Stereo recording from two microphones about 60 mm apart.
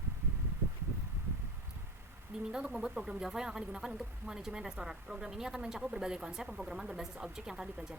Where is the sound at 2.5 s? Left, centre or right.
Centre.